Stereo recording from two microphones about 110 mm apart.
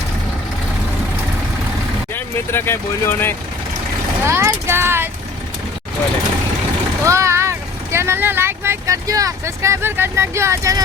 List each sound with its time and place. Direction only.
2.1 s speech: 20° left (ahead or behind)
4.2 s speech: 25° right (ahead or behind)
7.0 s speech: 25° right (ahead or behind)